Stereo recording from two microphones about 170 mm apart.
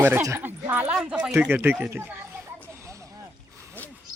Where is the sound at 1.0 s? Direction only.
5° right (ahead or behind).